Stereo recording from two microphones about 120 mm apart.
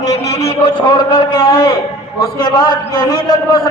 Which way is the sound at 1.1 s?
45° left (ahead or behind).